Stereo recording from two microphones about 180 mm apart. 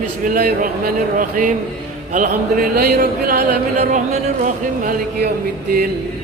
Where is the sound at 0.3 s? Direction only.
55° right (ahead or behind).